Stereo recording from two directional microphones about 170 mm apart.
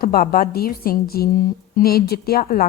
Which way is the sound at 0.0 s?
60° left (ahead or behind).